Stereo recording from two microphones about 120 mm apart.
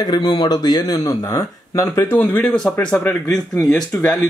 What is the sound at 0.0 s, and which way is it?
Speech, 35° left (ahead or behind).